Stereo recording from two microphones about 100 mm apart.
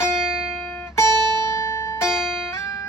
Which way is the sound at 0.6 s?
20° left (ahead or behind).